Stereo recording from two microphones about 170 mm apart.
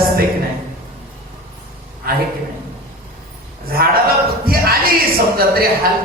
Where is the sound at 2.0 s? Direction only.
65° right (ahead or behind).